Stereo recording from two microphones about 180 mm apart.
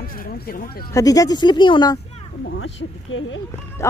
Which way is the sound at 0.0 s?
50° left (ahead or behind).